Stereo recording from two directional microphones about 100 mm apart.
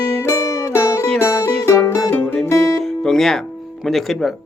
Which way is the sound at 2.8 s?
5° left (ahead or behind).